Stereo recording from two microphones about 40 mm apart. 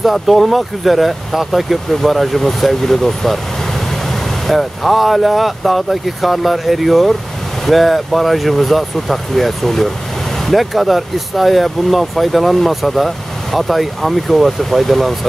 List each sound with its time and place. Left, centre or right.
0.0 s speech: centre